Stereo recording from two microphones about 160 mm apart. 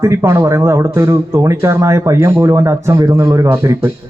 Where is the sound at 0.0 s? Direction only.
20° right (ahead or behind).